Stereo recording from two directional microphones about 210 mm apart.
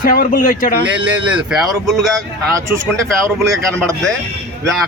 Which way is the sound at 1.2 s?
5° right (ahead or behind).